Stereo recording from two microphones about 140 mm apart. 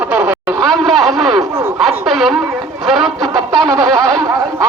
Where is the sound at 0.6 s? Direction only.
5° left (ahead or behind).